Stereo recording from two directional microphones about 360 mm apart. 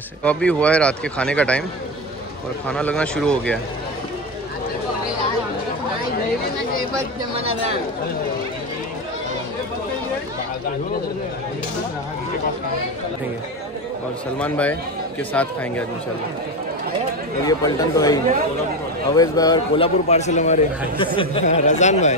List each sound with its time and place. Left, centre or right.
0.2 s speech: centre
2.7 s speech: centre
14.4 s speech: centre
17.4 s a man's voice: centre